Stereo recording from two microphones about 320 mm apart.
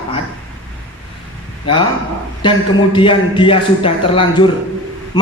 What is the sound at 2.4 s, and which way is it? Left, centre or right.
A woman's voice, centre.